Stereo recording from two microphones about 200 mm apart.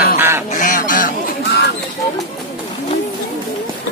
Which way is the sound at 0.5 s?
40° left (ahead or behind).